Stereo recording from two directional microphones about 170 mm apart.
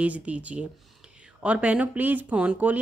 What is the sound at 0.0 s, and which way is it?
Speech, 10° right (ahead or behind).